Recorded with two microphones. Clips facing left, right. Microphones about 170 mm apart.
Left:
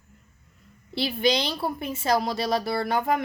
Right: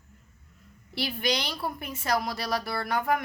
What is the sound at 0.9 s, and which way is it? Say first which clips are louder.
A woman's voice: left 5 dB; 25° left (ahead or behind).